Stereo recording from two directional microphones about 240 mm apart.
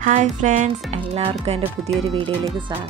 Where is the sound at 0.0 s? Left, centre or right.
Right.